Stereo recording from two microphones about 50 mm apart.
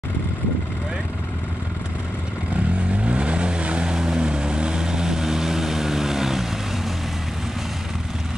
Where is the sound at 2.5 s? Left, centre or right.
Right; by 6.4 s centre.